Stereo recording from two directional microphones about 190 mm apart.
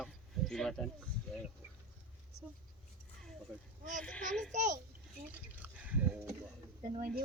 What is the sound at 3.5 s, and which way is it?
Speech, 5° right (ahead or behind).